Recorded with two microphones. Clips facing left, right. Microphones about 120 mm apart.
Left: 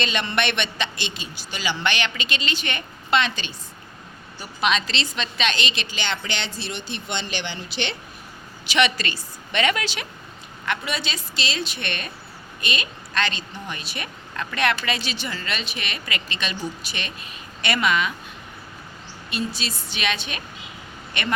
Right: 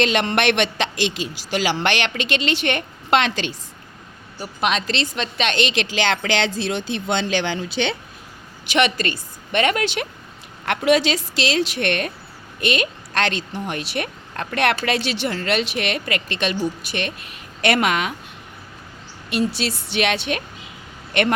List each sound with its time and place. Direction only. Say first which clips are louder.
0.0 s a man's voice: right 6 dB; 85° right
4.4 s a woman's voice: right 1 dB; 55° right (ahead or behind); by 6.5 s 90° right
8.6 s a woman's voice: right 3 dB; 50° right (ahead or behind)
10.7 s a woman's voice: right 10 dB; 90° right; by 18.1 s 70° right (ahead or behind)
19.3 s speech: right 7 dB; 70° right (ahead or behind)